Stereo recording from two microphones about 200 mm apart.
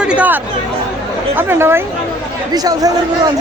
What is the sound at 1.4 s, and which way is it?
Speech, 10° right (ahead or behind).